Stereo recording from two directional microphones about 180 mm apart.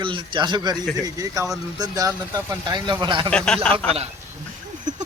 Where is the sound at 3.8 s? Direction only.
35° right (ahead or behind).